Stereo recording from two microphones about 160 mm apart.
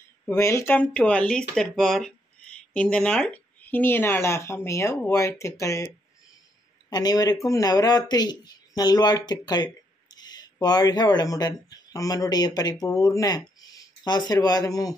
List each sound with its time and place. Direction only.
0.3 s speech: 15° left (ahead or behind)
6.9 s speech: 25° left (ahead or behind)